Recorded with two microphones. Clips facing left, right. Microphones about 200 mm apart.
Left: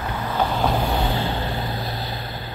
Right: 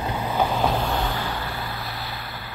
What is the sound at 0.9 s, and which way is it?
Vehicle, 20° left (ahead or behind).